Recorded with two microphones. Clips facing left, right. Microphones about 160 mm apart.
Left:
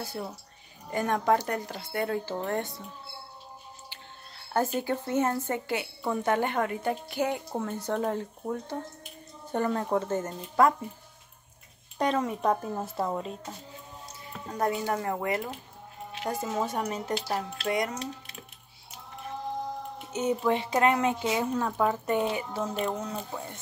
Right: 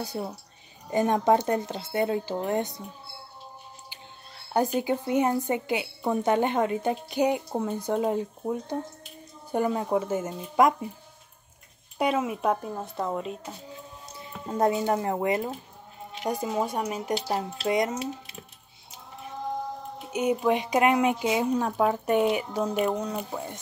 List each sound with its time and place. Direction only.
0.0 s a woman's voice: 20° right (ahead or behind)
4.6 s a woman's voice: 15° right (ahead or behind)
12.0 s a woman's voice: 10° right (ahead or behind)
14.5 s a woman's voice: 25° right (ahead or behind)
17.3 s speech: 20° right (ahead or behind)
20.1 s a woman's voice: 10° right (ahead or behind)